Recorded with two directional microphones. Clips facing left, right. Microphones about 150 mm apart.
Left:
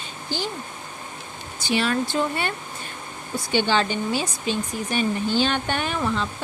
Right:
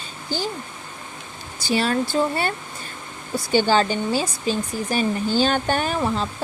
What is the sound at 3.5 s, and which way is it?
Speech, 40° right (ahead or behind).